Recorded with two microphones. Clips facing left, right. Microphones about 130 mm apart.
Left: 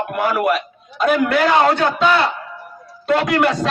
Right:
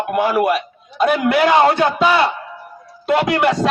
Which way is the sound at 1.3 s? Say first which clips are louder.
Right 2 dB; 10° right (ahead or behind).